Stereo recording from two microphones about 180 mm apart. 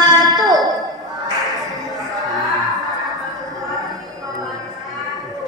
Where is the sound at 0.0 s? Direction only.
20° right (ahead or behind).